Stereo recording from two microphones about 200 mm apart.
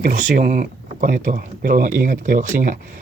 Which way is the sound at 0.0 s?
40° right (ahead or behind).